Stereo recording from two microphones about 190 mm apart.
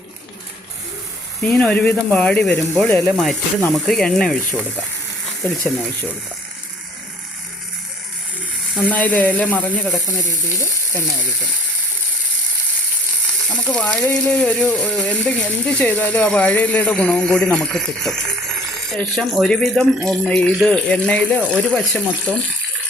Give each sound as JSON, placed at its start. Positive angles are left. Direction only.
{"t": 1.4, "sound": "speech", "side_deg": 5}
{"t": 8.7, "sound": "speech", "side_deg": 10}
{"t": 13.5, "sound": "speech", "side_deg": 5}